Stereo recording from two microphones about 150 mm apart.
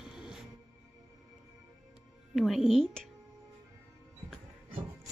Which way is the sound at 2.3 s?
Centre (ahead or behind).